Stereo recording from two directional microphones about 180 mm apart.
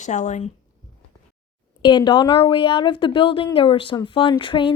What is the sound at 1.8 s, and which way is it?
A woman's voice, 25° left (ahead or behind).